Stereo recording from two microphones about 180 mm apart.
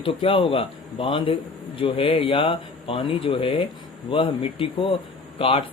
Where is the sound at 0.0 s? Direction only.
30° left (ahead or behind).